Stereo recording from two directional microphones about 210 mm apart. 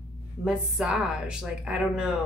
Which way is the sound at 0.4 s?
5° right (ahead or behind).